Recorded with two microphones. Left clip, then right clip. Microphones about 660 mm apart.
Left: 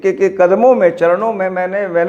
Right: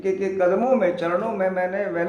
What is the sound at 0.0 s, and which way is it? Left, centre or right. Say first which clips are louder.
A man's voice: left 9 dB; left.